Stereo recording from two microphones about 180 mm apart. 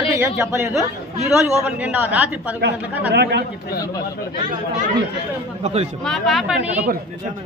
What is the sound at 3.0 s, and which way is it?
Speech, 70° right (ahead or behind).